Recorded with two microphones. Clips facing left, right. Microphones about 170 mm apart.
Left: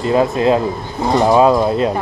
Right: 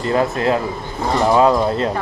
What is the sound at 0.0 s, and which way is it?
Speech, 20° left (ahead or behind).